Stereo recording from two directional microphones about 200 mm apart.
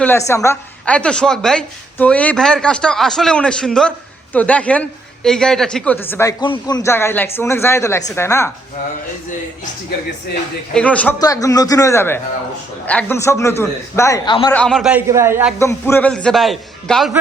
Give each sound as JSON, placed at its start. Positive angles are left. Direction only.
{"t": 0.0, "sound": "a woman's voice", "side_deg": 10}
{"t": 10.8, "sound": "a man's voice", "side_deg": 5}
{"t": 11.2, "sound": "a man's voice", "side_deg": 15}
{"t": 14.5, "sound": "a man's voice", "side_deg": 5}
{"t": 15.5, "sound": "a woman's voice", "side_deg": 15}